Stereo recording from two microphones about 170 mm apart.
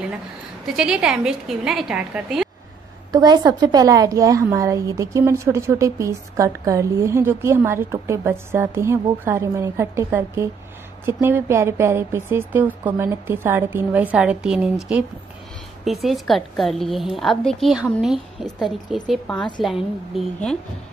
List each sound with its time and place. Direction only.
0.7 s a woman's voice: 5° right (ahead or behind)
3.1 s a woman's voice: 25° right (ahead or behind); by 20.5 s centre (ahead or behind)